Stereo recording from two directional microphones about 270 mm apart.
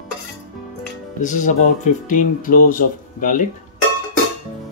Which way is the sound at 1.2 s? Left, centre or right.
Left.